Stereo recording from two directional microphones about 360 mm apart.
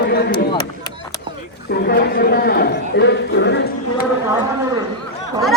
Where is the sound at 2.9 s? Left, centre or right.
Left.